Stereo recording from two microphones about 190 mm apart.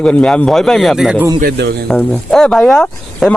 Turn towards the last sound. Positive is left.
turn(degrees=5)  # may be behind; listen again after turning